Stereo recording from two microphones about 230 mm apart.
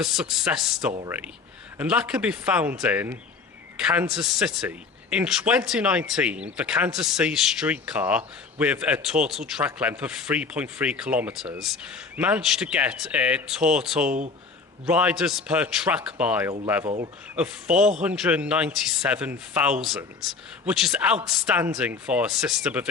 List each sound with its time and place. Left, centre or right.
0.0 s a man's voice: centre
17.7 s a man's voice: right
18.0 s a man's voice: centre